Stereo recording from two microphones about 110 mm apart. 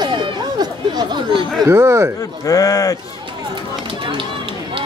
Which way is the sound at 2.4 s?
35° left (ahead or behind).